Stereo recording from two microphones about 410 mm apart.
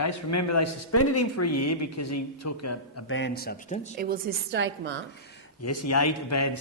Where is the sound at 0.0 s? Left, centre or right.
Left.